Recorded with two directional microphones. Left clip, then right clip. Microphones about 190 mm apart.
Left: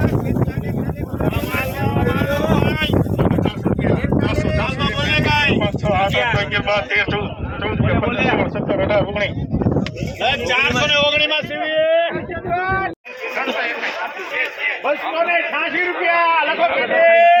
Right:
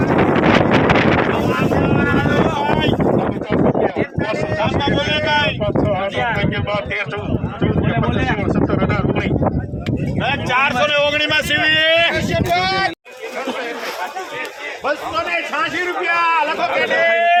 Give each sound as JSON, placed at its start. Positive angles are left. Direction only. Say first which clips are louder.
{"t": 4.9, "sound": "vehicle", "louder": "left 2 dB", "side_deg": -20}
{"t": 6.7, "sound": "speech", "louder": "left 4 dB", "side_deg": 0}
{"t": 10.2, "sound": "speech", "louder": "even", "side_deg": -25}
{"t": 11.6, "sound": "speech", "louder": "right 1 dB", "side_deg": -60}
{"t": 17.0, "sound": "a sound", "louder": "left 6 dB", "side_deg": 10}